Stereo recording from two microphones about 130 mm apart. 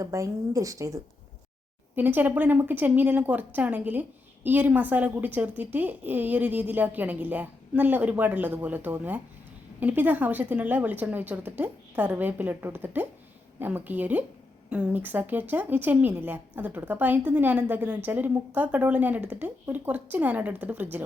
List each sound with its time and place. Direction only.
0.0 s speech: 25° right (ahead or behind)
2.0 s speech: 15° right (ahead or behind)